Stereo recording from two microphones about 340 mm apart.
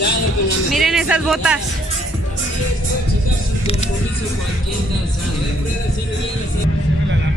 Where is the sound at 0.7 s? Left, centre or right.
Centre.